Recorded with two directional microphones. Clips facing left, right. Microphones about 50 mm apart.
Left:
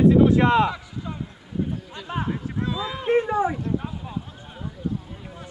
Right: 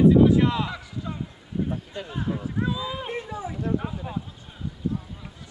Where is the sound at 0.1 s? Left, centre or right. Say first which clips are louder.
Left 2 dB; left.